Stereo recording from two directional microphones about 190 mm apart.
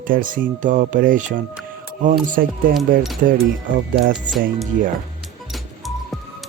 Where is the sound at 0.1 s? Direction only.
45° right (ahead or behind).